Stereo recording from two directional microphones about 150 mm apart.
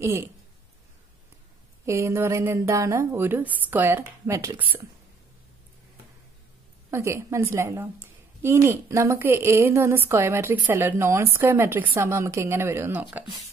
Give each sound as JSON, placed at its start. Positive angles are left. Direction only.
{"t": 0.0, "sound": "a woman's voice", "side_deg": -20}
{"t": 1.9, "sound": "speech", "side_deg": -20}
{"t": 6.9, "sound": "a woman's voice", "side_deg": -20}